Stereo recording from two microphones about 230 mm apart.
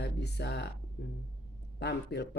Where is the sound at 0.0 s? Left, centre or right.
Left.